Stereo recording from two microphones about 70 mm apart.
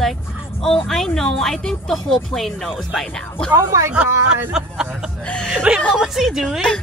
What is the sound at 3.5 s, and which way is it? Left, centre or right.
Speech, right.